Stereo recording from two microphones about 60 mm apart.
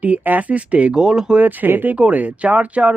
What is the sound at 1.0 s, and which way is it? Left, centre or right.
Speech, centre.